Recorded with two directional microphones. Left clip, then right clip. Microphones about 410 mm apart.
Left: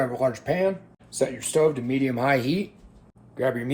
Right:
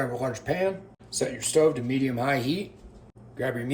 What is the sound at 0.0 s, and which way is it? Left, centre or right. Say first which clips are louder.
Speech: left 5 dB; centre.